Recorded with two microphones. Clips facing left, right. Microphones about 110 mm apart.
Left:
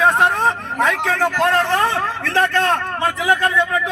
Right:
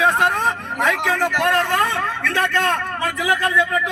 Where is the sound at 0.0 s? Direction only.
35° left (ahead or behind).